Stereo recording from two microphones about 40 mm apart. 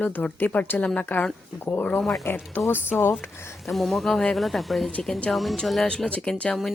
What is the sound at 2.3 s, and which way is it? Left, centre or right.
Speech, left.